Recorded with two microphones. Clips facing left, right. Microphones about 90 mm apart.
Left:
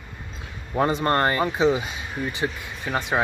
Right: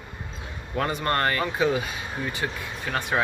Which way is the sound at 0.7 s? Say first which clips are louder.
Left 4 dB; 25° left (ahead or behind).